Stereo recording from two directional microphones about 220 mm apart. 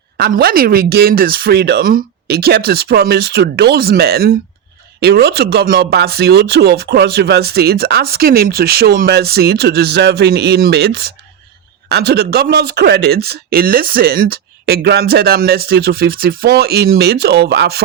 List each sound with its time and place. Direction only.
0.2 s a man's voice: 45° right (ahead or behind)